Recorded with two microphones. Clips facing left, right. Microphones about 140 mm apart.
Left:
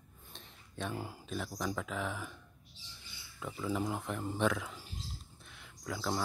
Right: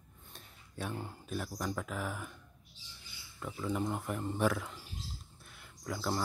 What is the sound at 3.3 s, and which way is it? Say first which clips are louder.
Speech: even; centre (ahead or behind).